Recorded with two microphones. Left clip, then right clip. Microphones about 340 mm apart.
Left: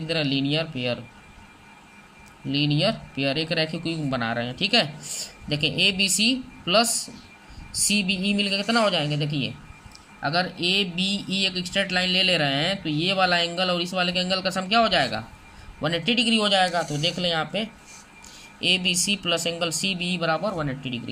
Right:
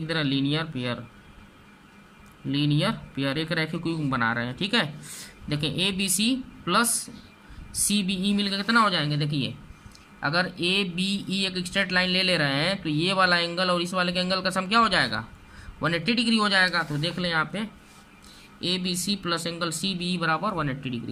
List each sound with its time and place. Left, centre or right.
0.3 s speech: centre
0.5 s speech: centre
2.6 s speech: right
2.8 s speech: centre
19.2 s speech: centre